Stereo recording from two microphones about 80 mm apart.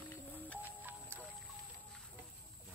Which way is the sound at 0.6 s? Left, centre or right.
Right.